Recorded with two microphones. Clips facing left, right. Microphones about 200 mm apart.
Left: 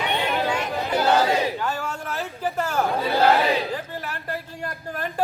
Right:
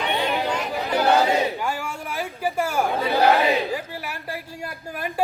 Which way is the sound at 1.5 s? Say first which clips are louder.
Even; 10° right (ahead or behind).